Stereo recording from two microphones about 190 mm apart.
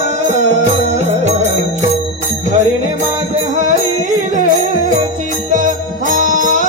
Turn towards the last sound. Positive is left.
turn(degrees=-45)  # may be behind; listen again after turning